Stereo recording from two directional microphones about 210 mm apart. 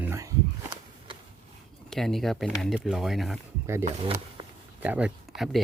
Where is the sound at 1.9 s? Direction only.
Centre (ahead or behind).